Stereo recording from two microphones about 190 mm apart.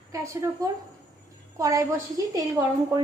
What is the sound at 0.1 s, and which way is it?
A woman's voice, 15° right (ahead or behind).